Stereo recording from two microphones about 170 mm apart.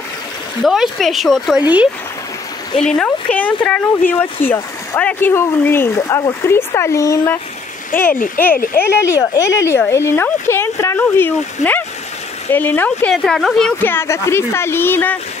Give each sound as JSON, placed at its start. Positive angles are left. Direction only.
{"t": 0.7, "sound": "speech", "side_deg": 0}
{"t": 2.8, "sound": "speech", "side_deg": 5}